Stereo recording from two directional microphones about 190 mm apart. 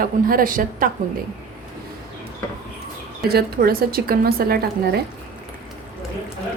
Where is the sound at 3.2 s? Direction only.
55° right (ahead or behind).